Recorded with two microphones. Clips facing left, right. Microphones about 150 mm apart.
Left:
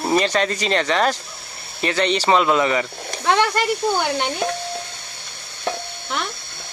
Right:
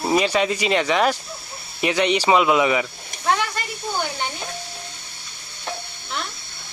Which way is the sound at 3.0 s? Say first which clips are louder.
Left 6 dB; 75° left (ahead or behind).